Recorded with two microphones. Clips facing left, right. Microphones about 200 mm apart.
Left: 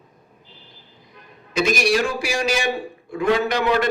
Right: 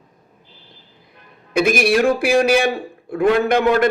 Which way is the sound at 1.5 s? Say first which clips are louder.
Right 4 dB; 55° right (ahead or behind).